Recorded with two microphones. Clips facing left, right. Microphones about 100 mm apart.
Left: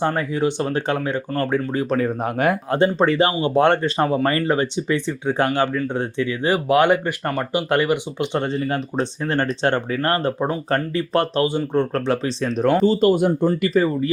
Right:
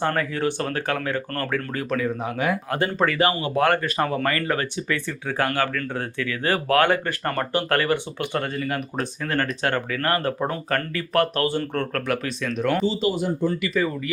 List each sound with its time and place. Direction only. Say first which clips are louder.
0.0 s speech: left 3 dB; 20° left (ahead or behind)
2.0 s speech: left 4 dB; 45° left (ahead or behind)
2.6 s speech: left 5 dB; 25° left (ahead or behind); by 13.5 s 55° left (ahead or behind)
13.5 s speech: left 5 dB; 35° left (ahead or behind)